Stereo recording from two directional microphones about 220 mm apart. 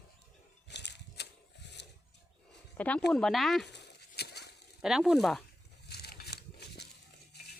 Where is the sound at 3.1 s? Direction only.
Centre (ahead or behind).